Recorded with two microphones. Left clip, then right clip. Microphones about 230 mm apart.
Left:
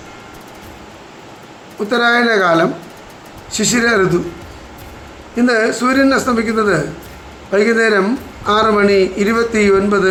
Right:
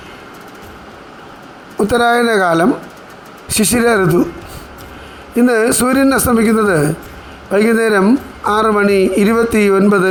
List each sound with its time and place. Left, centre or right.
1.9 s a man's voice: right
5.4 s a man's voice: right